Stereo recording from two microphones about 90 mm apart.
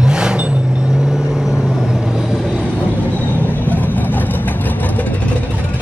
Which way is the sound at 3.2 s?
20° left (ahead or behind).